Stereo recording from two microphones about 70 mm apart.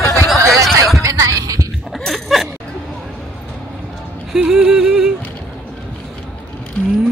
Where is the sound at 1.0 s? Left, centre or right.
Right.